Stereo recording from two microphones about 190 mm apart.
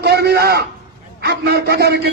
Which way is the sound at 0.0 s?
60° right (ahead or behind).